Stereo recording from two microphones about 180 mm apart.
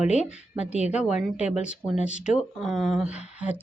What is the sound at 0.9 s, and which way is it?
Speech, 5° right (ahead or behind).